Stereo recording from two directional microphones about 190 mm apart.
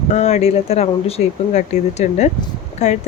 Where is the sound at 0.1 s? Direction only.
35° left (ahead or behind).